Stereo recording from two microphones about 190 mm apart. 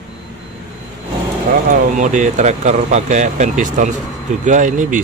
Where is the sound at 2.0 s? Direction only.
40° right (ahead or behind).